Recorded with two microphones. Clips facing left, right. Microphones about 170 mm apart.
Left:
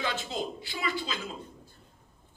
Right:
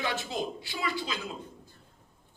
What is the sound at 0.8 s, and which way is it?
Speech, 20° left (ahead or behind).